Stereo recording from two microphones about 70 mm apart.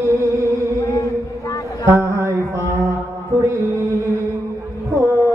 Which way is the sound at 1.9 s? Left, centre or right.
Right.